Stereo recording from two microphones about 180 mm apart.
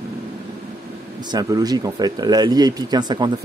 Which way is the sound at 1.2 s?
20° right (ahead or behind).